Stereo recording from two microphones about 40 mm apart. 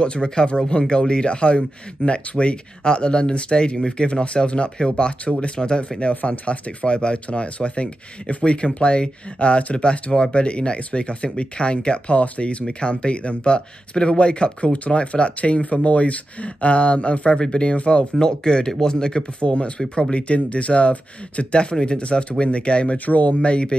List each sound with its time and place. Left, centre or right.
0.0 s speech: left
17.3 s speech: centre
18.2 s speech: centre
23.0 s speech: left
23.4 s speech: left